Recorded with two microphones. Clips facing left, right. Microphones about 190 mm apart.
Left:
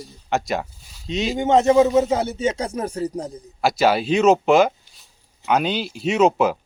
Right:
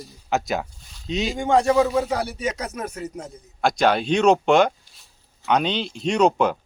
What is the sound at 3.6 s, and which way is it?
Speech, 5° left (ahead or behind).